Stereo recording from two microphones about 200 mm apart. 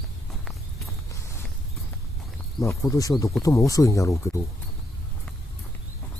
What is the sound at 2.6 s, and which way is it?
Speech, 15° left (ahead or behind).